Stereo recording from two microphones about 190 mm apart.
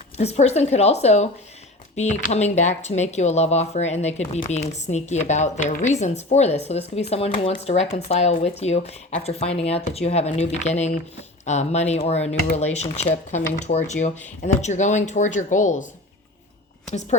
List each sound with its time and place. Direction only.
0.2 s speech: 35° left (ahead or behind)
12.3 s speech: 60° left (ahead or behind)
13.3 s speech: 35° left (ahead or behind)